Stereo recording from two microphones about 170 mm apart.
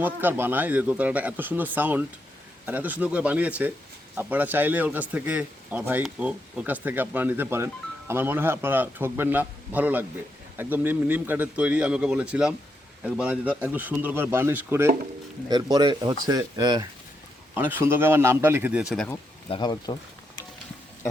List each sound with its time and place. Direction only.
0.0 s speech: 10° right (ahead or behind)
17.5 s speech: 10° right (ahead or behind)
19.5 s speech: 25° left (ahead or behind)